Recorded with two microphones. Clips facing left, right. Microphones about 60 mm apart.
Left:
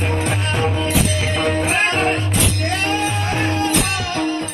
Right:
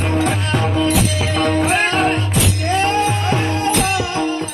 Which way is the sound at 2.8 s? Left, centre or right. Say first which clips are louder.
Right 5 dB; right.